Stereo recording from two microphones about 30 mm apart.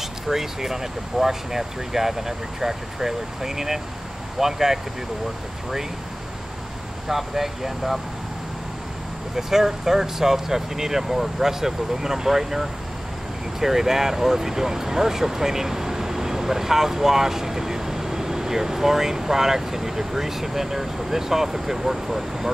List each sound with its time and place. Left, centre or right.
0.3 s speech: centre
7.1 s speech: centre
9.4 s speech: centre